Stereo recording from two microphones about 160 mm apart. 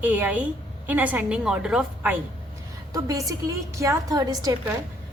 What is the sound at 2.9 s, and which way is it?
A woman's voice, 20° right (ahead or behind).